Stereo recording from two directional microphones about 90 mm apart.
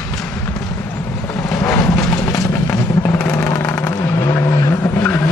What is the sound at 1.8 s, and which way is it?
Vehicle, 30° left (ahead or behind).